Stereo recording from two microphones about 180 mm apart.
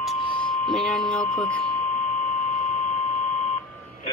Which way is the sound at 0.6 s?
Centre (ahead or behind).